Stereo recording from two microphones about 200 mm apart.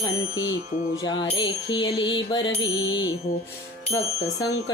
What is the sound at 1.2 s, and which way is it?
Music, 20° left (ahead or behind).